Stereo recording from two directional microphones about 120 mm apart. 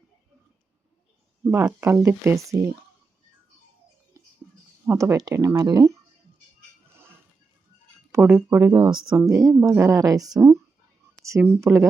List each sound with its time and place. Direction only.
1.5 s speech: 20° right (ahead or behind)
4.9 s speech: 25° right (ahead or behind)
8.1 s speech: 15° right (ahead or behind)
8.7 s speech: 35° right (ahead or behind)
9.1 s speech: 25° right (ahead or behind)